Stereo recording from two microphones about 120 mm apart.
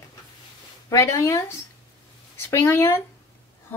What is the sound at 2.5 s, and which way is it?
Speech, 20° left (ahead or behind).